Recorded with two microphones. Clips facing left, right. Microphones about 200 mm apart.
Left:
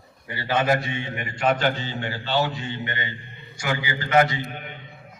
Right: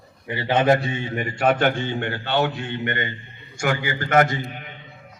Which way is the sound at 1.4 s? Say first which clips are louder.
Right 3 dB; 55° right (ahead or behind).